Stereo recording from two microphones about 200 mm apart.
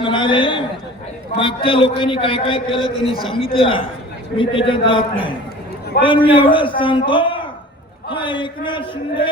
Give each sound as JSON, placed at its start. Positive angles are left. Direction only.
{"t": 0.0, "sound": "a man's voice", "side_deg": 25}
{"t": 6.0, "sound": "a man's voice", "side_deg": 50}
{"t": 6.3, "sound": "a man's voice", "side_deg": 25}